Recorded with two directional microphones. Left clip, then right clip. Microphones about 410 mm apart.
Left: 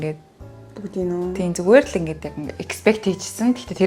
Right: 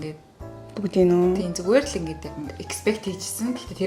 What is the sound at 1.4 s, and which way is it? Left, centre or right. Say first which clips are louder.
Speech: left 6 dB; left.